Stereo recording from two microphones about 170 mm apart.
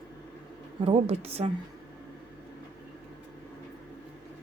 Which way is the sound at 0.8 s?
35° right (ahead or behind).